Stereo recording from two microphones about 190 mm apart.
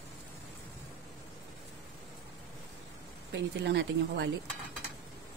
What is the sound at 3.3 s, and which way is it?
Speech, 65° right (ahead or behind).